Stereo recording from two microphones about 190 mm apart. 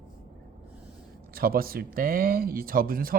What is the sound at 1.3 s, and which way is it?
Speech, 50° right (ahead or behind).